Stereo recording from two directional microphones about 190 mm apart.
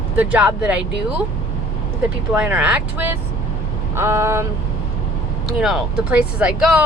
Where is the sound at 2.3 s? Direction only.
5° right (ahead or behind).